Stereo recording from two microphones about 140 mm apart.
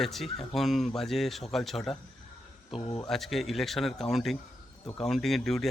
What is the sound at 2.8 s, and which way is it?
Speech, 45° left (ahead or behind).